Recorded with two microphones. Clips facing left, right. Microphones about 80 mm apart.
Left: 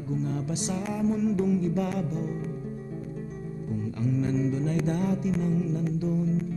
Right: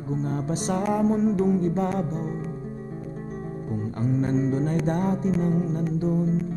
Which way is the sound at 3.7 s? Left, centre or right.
Right.